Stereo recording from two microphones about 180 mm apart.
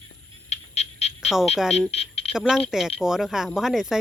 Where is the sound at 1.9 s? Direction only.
35° left (ahead or behind).